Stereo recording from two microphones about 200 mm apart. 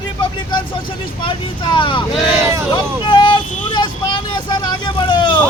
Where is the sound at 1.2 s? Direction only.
25° left (ahead or behind).